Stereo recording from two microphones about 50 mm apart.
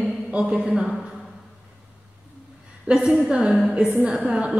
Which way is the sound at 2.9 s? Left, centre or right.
Right.